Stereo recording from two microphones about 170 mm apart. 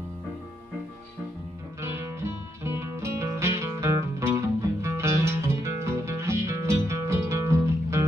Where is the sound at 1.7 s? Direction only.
15° right (ahead or behind).